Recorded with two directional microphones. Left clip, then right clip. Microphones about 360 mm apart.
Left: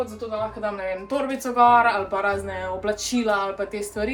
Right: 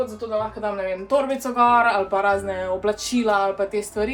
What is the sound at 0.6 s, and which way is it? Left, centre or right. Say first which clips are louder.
Speech: right 2 dB; centre.